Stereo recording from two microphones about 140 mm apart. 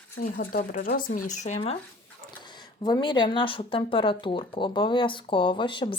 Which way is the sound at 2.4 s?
30° left (ahead or behind).